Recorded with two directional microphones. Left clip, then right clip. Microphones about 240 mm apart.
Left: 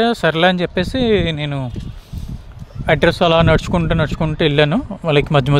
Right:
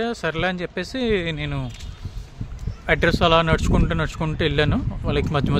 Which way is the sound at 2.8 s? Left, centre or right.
Left.